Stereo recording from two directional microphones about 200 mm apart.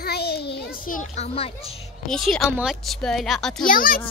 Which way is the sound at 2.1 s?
Centre (ahead or behind).